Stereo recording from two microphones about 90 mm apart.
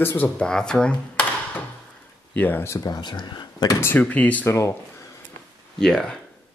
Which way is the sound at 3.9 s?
20° left (ahead or behind).